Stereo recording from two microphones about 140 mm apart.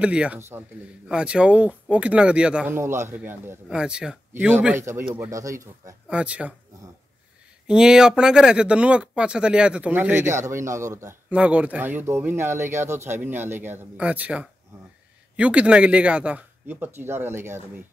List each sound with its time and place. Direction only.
0.0 s speech: 10° right (ahead or behind)
2.8 s speech: 20° right (ahead or behind)
6.0 s speech: 10° right (ahead or behind)
7.6 s speech: 5° right (ahead or behind)